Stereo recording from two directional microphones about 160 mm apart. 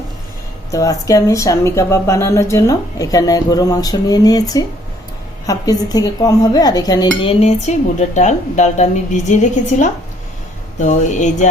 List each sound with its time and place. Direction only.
0.7 s speech: 20° left (ahead or behind); by 11.4 s 50° left (ahead or behind)